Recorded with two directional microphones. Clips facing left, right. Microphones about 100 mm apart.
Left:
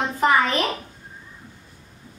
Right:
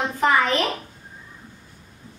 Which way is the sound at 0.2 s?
Centre (ahead or behind).